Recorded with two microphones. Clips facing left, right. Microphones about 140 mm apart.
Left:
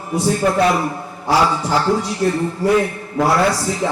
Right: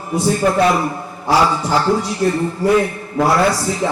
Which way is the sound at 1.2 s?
35° right (ahead or behind).